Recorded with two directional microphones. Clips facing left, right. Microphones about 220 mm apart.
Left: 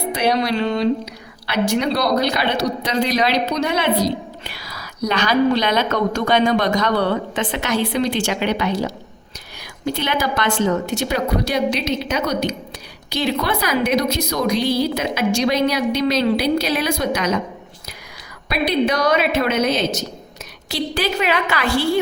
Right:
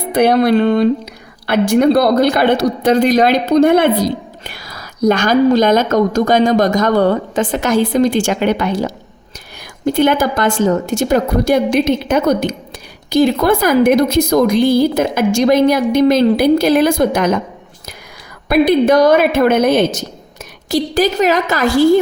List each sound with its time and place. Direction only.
0.1 s a woman's voice: 55° right (ahead or behind)
18.4 s a woman's voice: 50° right (ahead or behind)